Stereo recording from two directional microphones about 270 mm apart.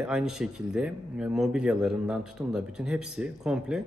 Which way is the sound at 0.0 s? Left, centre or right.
Centre.